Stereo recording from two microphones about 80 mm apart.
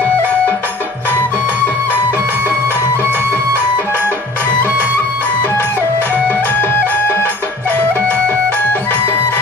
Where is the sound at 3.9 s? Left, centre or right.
Left.